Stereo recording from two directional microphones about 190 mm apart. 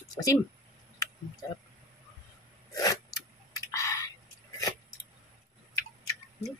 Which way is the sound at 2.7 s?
20° left (ahead or behind).